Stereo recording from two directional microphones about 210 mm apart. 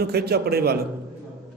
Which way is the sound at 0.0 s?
50° right (ahead or behind).